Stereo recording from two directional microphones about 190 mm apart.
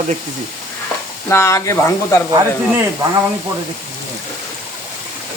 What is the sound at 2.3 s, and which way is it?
Speech, 15° right (ahead or behind).